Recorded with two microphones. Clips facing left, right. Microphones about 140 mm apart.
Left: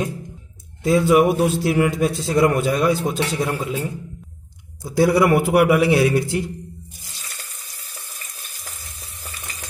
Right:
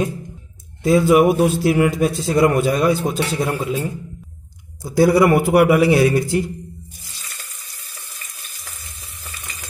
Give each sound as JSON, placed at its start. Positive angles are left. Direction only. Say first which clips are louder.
{"t": 0.8, "sound": "a man's voice", "louder": "right 2 dB", "side_deg": -5}